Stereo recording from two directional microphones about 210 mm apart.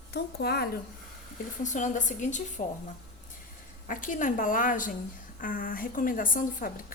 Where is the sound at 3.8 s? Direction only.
40° left (ahead or behind).